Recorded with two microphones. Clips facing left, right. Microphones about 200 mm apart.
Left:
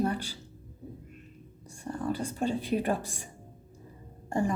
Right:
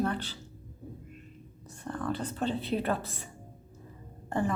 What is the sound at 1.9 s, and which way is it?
Speech, 10° left (ahead or behind).